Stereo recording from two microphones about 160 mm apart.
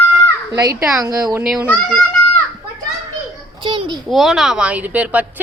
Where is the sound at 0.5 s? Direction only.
25° right (ahead or behind).